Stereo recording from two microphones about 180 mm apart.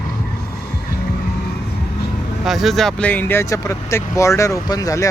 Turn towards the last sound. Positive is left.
turn(degrees=20)  # may be behind; listen again after turning